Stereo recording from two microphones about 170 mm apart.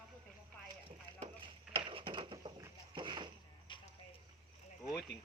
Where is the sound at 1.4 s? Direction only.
30° right (ahead or behind).